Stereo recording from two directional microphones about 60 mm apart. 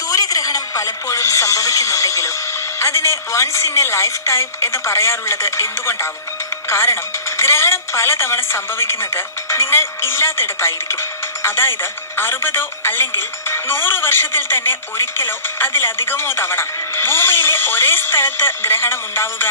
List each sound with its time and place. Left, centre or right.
0.1 s speech: left